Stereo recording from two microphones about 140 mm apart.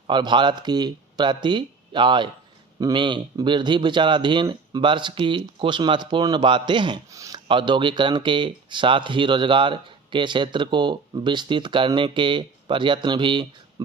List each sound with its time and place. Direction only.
0.1 s speech: 35° right (ahead or behind)
7.4 s speech: 35° right (ahead or behind)